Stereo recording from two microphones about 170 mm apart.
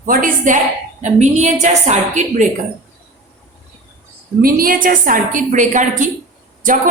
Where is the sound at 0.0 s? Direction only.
50° right (ahead or behind).